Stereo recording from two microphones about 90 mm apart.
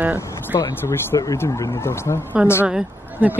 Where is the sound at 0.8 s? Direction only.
30° left (ahead or behind).